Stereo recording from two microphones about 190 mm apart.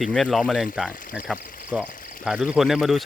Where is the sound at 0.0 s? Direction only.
Centre (ahead or behind).